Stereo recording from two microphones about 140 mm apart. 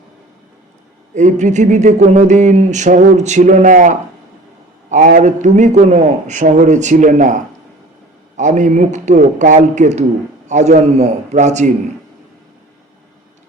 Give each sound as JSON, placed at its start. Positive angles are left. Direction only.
{"t": 1.1, "sound": "speech", "side_deg": -60}